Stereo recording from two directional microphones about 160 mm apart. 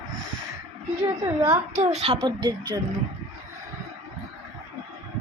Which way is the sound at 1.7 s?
40° right (ahead or behind).